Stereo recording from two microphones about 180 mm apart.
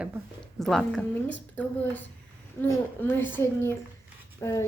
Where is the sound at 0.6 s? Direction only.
Centre (ahead or behind).